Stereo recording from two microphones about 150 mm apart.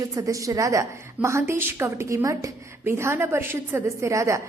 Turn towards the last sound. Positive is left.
turn(degrees=-20)  # may be behind; listen again after turning